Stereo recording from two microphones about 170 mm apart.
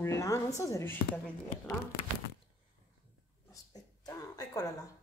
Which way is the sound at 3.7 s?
20° left (ahead or behind).